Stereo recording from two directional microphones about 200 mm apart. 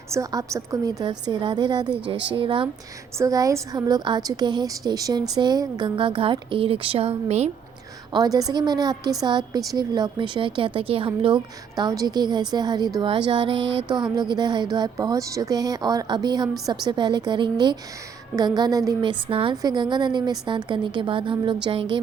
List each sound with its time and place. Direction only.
0.1 s a woman's voice: 15° right (ahead or behind); by 7.5 s 30° right (ahead or behind)
8.1 s speech: 20° right (ahead or behind)